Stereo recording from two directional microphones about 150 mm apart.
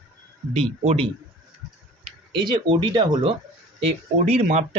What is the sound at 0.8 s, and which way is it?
Speech, 40° right (ahead or behind).